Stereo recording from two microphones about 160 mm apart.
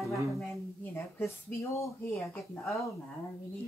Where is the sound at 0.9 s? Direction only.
15° left (ahead or behind).